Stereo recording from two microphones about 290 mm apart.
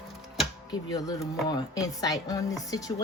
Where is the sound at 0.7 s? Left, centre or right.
Centre.